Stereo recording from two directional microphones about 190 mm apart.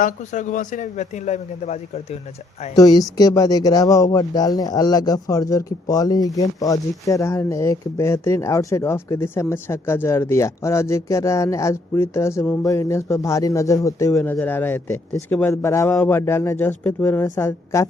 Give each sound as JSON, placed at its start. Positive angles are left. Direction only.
{"t": 0.0, "sound": "a man's voice", "side_deg": 40}
{"t": 2.7, "sound": "speech", "side_deg": 20}